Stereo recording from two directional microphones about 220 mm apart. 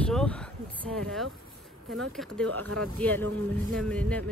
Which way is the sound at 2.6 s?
85° right.